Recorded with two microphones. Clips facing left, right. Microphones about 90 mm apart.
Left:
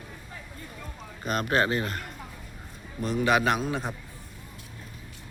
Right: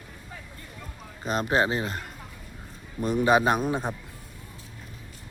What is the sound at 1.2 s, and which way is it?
Speech, 25° right (ahead or behind).